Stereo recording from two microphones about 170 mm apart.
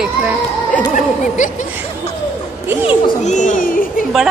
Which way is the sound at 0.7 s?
50° left (ahead or behind).